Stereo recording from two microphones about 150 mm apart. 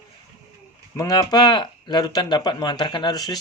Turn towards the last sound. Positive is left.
turn(degrees=25)  # may be behind; listen again after turning